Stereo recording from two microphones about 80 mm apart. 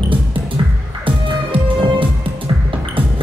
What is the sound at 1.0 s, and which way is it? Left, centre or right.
Music, right.